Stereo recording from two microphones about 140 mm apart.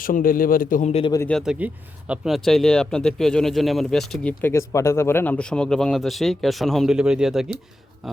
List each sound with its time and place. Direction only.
0.0 s a man's voice: 85° left
0.9 s speech: 45° left (ahead or behind)
1.3 s speech: centre (ahead or behind)